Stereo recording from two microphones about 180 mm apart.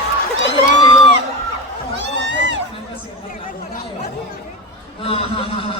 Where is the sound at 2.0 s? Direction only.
80° right.